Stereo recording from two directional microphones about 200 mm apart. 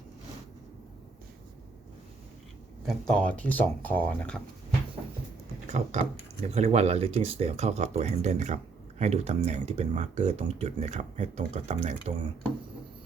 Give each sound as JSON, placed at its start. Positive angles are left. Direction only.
{"t": 2.8, "sound": "speech", "side_deg": 5}
{"t": 5.6, "sound": "speech", "side_deg": -35}